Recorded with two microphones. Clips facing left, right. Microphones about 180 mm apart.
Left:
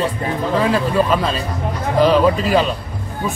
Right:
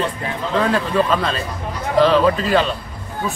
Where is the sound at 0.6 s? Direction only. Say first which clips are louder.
Even; 5° left (ahead or behind).